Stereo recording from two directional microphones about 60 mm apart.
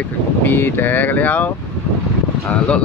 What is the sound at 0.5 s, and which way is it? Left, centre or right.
Speech, left.